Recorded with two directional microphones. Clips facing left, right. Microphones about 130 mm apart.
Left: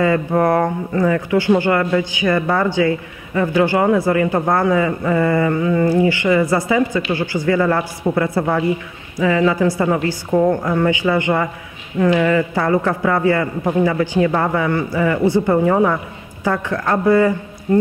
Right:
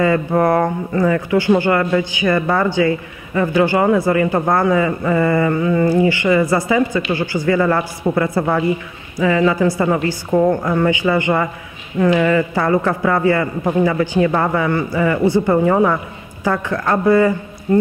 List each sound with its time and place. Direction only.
0.0 s a man's voice: 25° right (ahead or behind)
10.9 s a man's voice: 20° right (ahead or behind)